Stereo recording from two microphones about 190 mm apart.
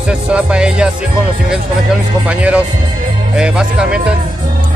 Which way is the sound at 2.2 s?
5° right (ahead or behind).